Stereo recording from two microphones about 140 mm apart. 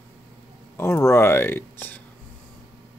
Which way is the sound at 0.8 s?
20° left (ahead or behind).